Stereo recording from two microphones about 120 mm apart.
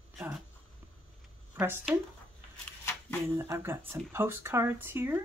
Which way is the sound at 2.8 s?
20° left (ahead or behind).